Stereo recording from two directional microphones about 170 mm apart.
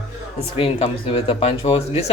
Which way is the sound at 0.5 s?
35° left (ahead or behind).